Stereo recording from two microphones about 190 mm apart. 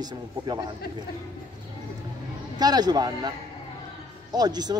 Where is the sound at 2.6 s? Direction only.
20° right (ahead or behind).